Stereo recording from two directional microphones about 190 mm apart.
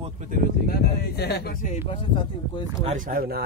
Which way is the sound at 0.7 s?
55° left (ahead or behind).